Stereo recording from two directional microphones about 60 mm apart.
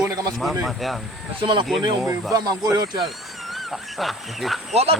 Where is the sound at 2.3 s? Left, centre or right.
Right.